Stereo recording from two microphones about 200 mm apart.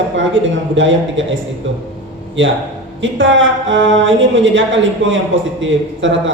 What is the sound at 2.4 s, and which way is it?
A woman's voice, 70° right (ahead or behind).